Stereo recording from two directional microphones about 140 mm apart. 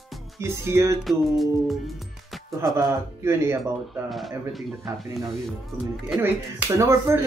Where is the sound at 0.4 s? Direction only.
20° right (ahead or behind).